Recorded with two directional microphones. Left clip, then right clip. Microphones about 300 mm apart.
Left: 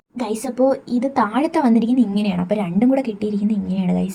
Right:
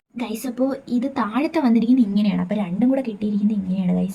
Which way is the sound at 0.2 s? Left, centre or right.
Centre.